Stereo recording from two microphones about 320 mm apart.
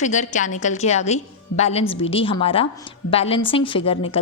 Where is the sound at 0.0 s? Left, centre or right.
Left.